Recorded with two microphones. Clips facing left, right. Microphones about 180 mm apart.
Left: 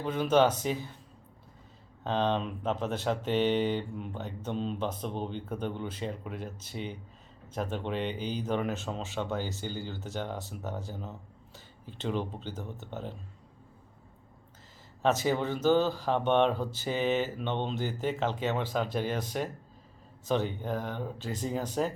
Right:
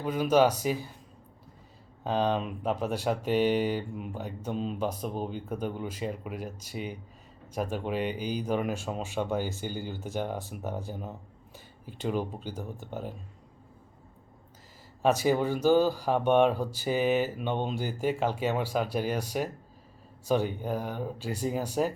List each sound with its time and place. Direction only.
0.0 s speech: 10° right (ahead or behind)
2.0 s speech: 10° right (ahead or behind)
15.0 s speech: 10° right (ahead or behind)